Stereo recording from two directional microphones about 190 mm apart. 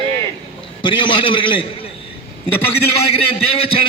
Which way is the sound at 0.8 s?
25° left (ahead or behind).